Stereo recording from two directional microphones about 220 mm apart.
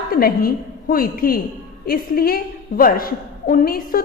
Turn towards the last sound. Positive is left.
turn(degrees=40)  # may be behind; listen again after turning